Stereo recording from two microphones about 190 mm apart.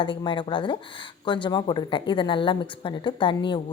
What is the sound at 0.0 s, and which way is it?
A woman's voice, 25° left (ahead or behind).